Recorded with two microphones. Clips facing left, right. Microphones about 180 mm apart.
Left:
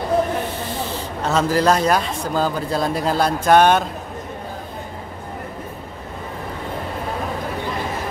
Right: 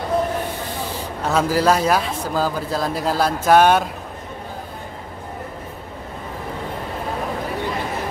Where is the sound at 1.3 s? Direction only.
5° right (ahead or behind).